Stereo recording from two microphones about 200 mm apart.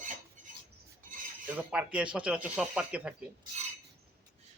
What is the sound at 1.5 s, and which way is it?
Speech, 5° right (ahead or behind).